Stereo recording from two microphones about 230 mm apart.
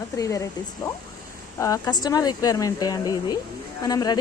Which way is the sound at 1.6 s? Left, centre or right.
Centre.